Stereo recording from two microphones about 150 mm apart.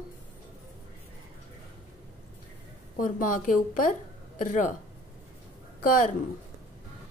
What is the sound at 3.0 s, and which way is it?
A woman's voice, 65° left (ahead or behind).